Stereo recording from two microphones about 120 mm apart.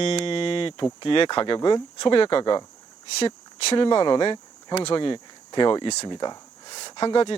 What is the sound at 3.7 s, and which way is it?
Speech, 50° left (ahead or behind).